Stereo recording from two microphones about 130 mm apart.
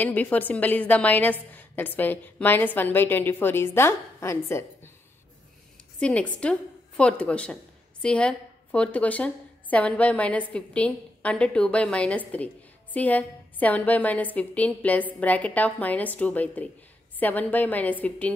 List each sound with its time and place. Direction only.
0.0 s a woman's voice: 15° left (ahead or behind)
5.9 s a woman's voice: 10° left (ahead or behind)